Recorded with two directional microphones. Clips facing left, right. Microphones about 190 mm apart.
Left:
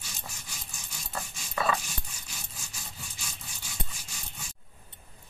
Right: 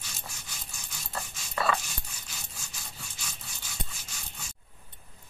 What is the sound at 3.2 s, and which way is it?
Rub, centre (ahead or behind).